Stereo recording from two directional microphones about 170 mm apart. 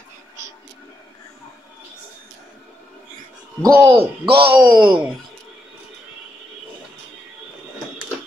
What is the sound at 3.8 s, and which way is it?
Speech, 30° right (ahead or behind).